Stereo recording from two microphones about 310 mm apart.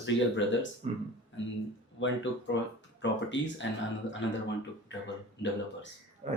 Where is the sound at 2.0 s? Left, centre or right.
Left.